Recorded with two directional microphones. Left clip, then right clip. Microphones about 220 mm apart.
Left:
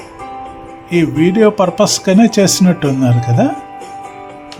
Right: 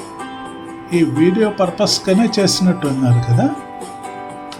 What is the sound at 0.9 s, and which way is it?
Speech, 20° left (ahead or behind).